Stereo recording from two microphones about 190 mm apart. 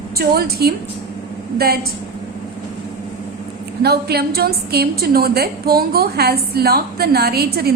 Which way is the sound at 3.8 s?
55° right (ahead or behind).